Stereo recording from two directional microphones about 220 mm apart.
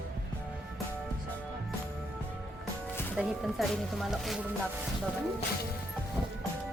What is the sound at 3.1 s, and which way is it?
Speech, centre (ahead or behind).